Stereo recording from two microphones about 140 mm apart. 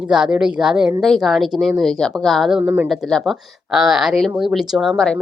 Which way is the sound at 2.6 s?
20° right (ahead or behind).